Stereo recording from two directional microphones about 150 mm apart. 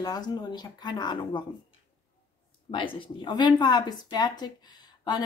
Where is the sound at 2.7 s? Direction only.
35° left (ahead or behind).